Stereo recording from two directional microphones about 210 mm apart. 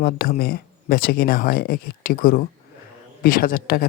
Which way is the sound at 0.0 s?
45° left (ahead or behind).